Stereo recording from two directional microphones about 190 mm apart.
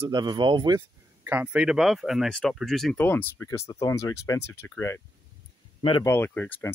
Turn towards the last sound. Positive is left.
turn(degrees=10)  # may be behind; listen again after turning